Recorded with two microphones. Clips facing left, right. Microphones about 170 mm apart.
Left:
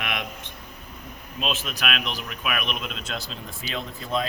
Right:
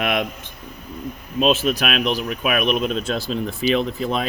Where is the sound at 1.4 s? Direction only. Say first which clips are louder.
Right 10 dB; 35° right (ahead or behind).